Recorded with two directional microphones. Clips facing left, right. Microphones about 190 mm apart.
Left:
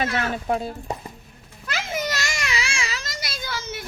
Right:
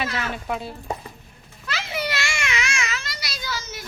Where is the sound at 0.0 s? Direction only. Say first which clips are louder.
Left 3 dB; 50° left (ahead or behind).